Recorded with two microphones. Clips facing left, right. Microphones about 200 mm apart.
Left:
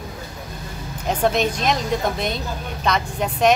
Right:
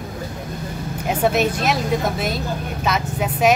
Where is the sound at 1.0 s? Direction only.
5° right (ahead or behind).